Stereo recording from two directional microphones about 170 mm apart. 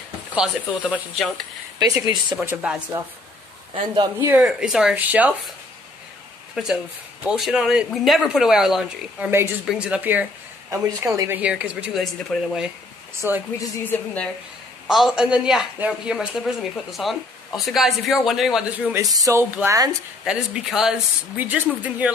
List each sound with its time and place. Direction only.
0.3 s speech: 5° right (ahead or behind)
1.9 s speech: 20° right (ahead or behind)
2.4 s a woman's voice: 10° right (ahead or behind)
3.9 s speech: 25° right (ahead or behind)
4.3 s speech: 5° right (ahead or behind)
6.5 s a woman's voice: centre (ahead or behind)
13.2 s a woman's voice: 15° right (ahead or behind)
13.6 s speech: 10° left (ahead or behind)
14.9 s a woman's voice: centre (ahead or behind)
20.2 s a woman's voice: 5° right (ahead or behind)